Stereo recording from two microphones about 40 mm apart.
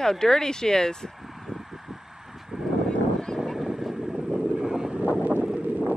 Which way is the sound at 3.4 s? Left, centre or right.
Centre.